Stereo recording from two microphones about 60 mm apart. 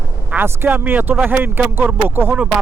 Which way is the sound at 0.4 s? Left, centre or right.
Right.